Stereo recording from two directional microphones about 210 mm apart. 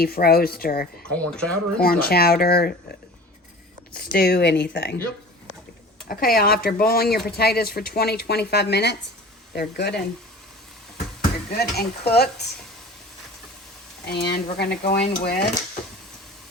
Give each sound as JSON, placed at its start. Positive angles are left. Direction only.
{"t": 0.0, "sound": "speech", "side_deg": 45}
{"t": 1.1, "sound": "speech", "side_deg": 5}
{"t": 1.8, "sound": "speech", "side_deg": 45}
{"t": 3.9, "sound": "speech", "side_deg": 45}
{"t": 6.1, "sound": "speech", "side_deg": 45}
{"t": 11.5, "sound": "speech", "side_deg": 50}
{"t": 14.0, "sound": "speech", "side_deg": 55}